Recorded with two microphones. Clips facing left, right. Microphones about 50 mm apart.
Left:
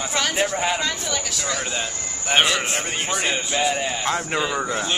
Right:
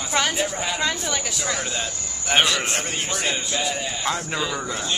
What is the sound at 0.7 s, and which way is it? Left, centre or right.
Speech, centre.